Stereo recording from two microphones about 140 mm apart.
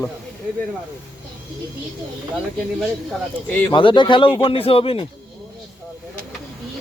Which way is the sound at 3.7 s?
35° left (ahead or behind).